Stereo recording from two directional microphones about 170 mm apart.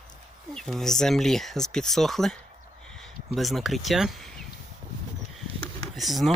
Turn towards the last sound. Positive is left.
turn(degrees=0)  # may be behind; listen again after turning